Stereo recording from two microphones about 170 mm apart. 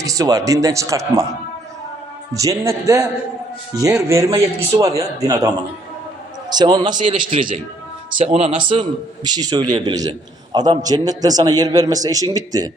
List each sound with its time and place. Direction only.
0.0 s a man's voice: 20° right (ahead or behind)
2.3 s a man's voice: 20° right (ahead or behind)
6.5 s a man's voice: 25° right (ahead or behind)
7.3 s a man's voice: 50° right (ahead or behind)
8.2 s a man's voice: 35° right (ahead or behind); by 12.7 s 20° right (ahead or behind)